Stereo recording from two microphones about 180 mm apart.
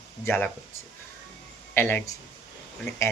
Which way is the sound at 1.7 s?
10° left (ahead or behind).